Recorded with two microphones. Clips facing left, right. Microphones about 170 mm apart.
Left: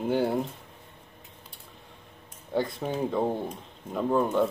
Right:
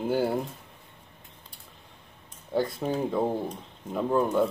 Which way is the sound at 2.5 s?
Centre (ahead or behind).